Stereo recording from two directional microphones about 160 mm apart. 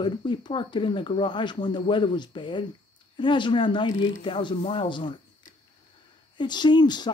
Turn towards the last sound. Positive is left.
turn(degrees=25)  # may be behind; listen again after turning